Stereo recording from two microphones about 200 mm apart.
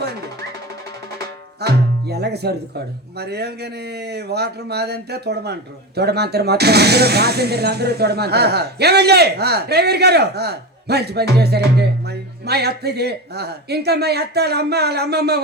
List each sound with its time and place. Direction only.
1.6 s speech: 55° right (ahead or behind)